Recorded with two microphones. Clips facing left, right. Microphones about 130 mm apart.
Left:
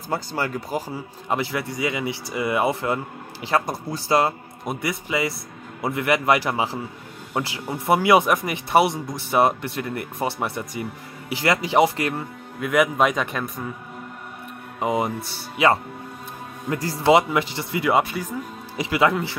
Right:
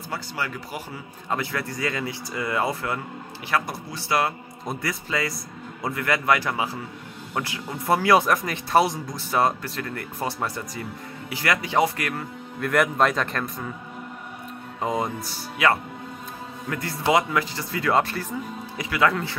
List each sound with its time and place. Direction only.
0.1 s speech: 40° left (ahead or behind)
1.3 s speech: 20° left (ahead or behind)
4.8 s speech: 25° left (ahead or behind)
12.5 s speech: 5° left (ahead or behind)
14.8 s speech: 15° left (ahead or behind)
18.8 s speech: 20° left (ahead or behind)